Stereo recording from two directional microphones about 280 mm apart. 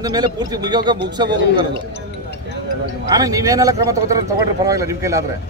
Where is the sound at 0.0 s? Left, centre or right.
Centre.